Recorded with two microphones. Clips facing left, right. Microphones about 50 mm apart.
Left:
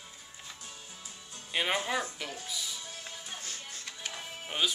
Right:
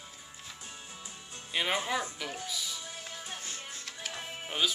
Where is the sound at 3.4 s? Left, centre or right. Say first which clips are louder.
Right 1 dB; centre.